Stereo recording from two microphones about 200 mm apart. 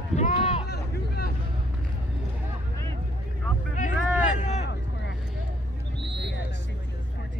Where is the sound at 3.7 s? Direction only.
40° left (ahead or behind).